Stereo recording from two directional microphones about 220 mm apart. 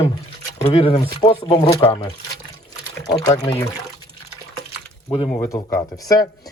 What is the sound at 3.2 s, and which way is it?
Speech, 15° left (ahead or behind).